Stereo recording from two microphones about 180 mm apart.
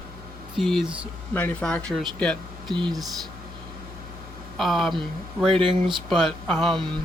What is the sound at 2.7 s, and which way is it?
Speech, 25° right (ahead or behind).